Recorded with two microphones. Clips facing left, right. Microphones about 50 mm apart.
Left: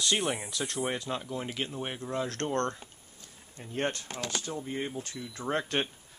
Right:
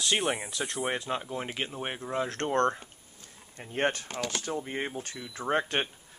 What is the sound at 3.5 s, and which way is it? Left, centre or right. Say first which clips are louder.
Speech: right 3 dB; right.